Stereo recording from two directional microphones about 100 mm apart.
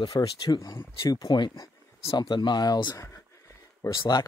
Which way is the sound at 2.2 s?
50° left (ahead or behind).